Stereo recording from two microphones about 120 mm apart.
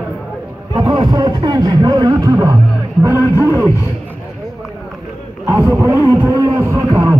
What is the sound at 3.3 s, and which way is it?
Wild animals, 25° right (ahead or behind).